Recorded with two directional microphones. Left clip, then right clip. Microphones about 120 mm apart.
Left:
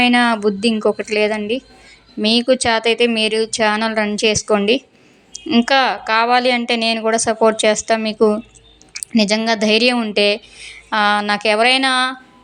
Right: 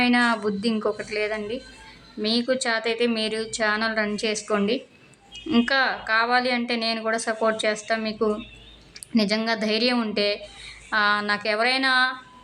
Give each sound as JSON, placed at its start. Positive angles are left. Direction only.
{"t": 0.0, "sound": "speech", "side_deg": 35}